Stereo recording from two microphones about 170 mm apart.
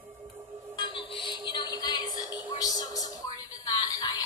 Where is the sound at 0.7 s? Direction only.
30° left (ahead or behind).